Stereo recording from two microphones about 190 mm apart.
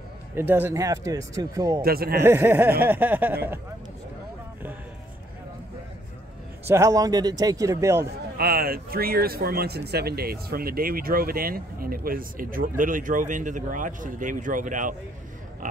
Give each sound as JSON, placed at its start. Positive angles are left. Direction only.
{"t": 0.4, "sound": "a man's voice", "side_deg": -10}
{"t": 1.8, "sound": "speech", "side_deg": -50}
{"t": 2.2, "sound": "a man's voice", "side_deg": -10}
{"t": 6.7, "sound": "a man's voice", "side_deg": -15}
{"t": 8.4, "sound": "speech", "side_deg": -55}
{"t": 15.6, "sound": "pig", "side_deg": -45}